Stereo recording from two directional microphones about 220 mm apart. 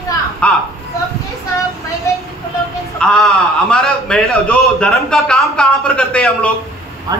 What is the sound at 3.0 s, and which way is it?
A man's voice, 5° left (ahead or behind).